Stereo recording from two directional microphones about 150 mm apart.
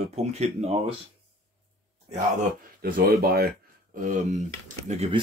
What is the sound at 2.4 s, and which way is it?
Speech, 75° right (ahead or behind).